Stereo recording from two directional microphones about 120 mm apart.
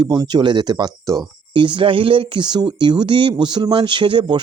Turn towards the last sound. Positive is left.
turn(degrees=-40)  # may be behind; listen again after turning